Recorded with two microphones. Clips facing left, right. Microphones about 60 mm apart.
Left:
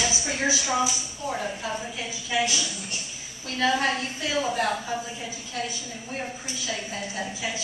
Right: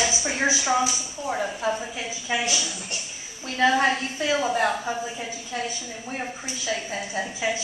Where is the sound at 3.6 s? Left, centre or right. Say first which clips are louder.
Right 4 dB; right.